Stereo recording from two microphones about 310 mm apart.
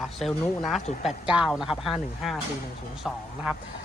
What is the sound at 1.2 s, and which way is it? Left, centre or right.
Speech, centre.